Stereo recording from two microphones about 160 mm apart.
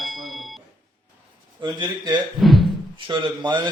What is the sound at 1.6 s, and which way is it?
Speech, 25° right (ahead or behind).